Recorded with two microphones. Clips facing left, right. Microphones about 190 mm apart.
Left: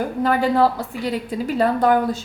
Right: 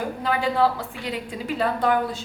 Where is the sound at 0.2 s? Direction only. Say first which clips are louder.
Left 5 dB; 45° left (ahead or behind).